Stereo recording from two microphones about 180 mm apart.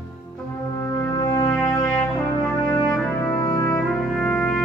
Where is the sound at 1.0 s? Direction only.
15° left (ahead or behind).